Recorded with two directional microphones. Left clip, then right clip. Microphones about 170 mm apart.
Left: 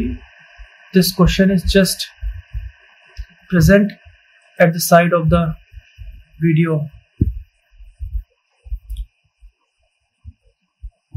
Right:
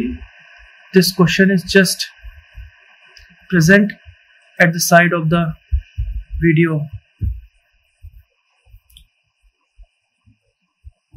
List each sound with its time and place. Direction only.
0.9 s speech: 5° left (ahead or behind)
3.4 s speech: centre (ahead or behind)